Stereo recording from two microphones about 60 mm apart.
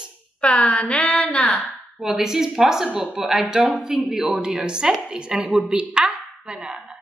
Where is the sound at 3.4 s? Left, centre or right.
Centre.